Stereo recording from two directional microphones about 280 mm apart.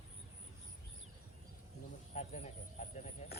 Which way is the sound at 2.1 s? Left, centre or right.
Left.